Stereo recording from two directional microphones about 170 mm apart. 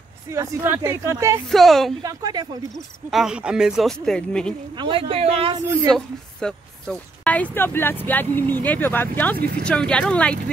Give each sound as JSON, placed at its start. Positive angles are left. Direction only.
{"t": 0.3, "sound": "speech", "side_deg": -15}
{"t": 1.5, "sound": "speech", "side_deg": 0}
{"t": 2.0, "sound": "speech", "side_deg": -25}
{"t": 2.7, "sound": "speech", "side_deg": 0}
{"t": 4.7, "sound": "speech", "side_deg": -30}
{"t": 5.9, "sound": "a woman's voice", "side_deg": 5}